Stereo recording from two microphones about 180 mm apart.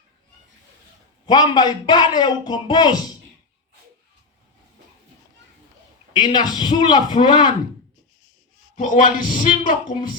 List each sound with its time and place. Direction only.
1.3 s speech: 25° left (ahead or behind)
6.1 s speech: 25° left (ahead or behind)
8.7 s speech: 45° left (ahead or behind)